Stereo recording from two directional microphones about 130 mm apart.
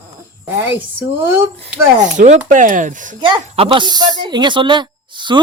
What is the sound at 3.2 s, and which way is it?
Speech, 40° right (ahead or behind).